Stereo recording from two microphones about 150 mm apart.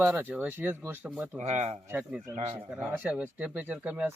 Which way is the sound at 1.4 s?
45° right (ahead or behind).